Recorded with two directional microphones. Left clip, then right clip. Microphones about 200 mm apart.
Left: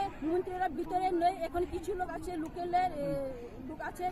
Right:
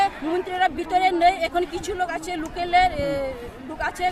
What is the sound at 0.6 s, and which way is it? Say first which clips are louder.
Speech: right 16 dB; 20° right (ahead or behind).